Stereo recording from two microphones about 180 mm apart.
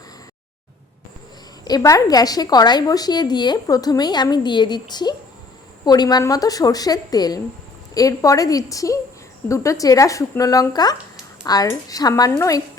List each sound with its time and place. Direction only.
1.6 s a woman's voice: 20° left (ahead or behind)